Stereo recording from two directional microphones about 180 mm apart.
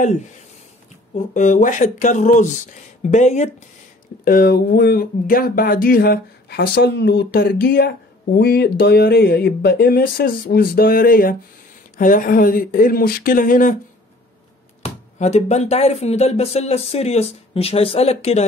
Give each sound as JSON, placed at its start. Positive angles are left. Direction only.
{"t": 1.1, "sound": "speech", "side_deg": 45}
{"t": 4.2, "sound": "speech", "side_deg": 55}
{"t": 14.8, "sound": "speech", "side_deg": 40}